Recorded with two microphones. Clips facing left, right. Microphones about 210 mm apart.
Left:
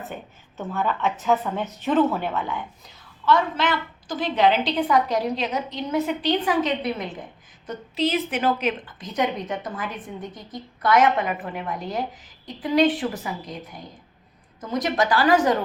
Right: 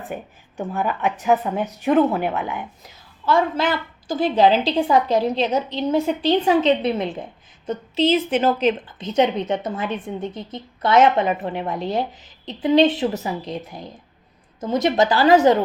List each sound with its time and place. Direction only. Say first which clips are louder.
0.0 s a woman's voice: right 4 dB; 15° right (ahead or behind)
3.2 s a woman's voice: right 2 dB; 30° right (ahead or behind)